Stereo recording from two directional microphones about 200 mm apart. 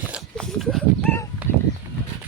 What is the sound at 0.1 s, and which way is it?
Dog, centre (ahead or behind).